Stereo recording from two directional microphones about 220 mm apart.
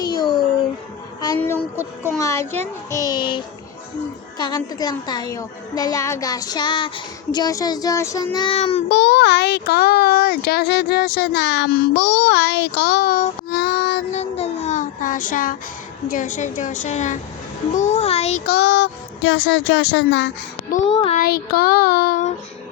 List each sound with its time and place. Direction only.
0.0 s music: 20° left (ahead or behind)
1.4 s a woman's voice: 10° left (ahead or behind)
8.4 s a child's voice: 25° left (ahead or behind)
8.9 s a child's voice: 50° left (ahead or behind)
14.1 s a woman's voice: 30° left (ahead or behind)
18.4 s a child's voice: 50° left (ahead or behind)
20.9 s a child's voice: 25° left (ahead or behind)
21.2 s a woman's voice: 45° left (ahead or behind)